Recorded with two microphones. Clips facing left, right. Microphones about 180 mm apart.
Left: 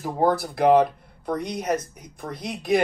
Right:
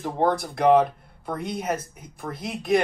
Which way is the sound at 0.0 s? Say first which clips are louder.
Left 1 dB; 5° left (ahead or behind).